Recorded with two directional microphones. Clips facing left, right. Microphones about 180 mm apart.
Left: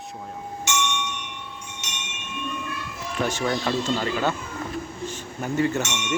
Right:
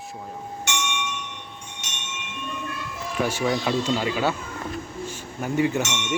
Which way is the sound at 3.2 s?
10° right (ahead or behind).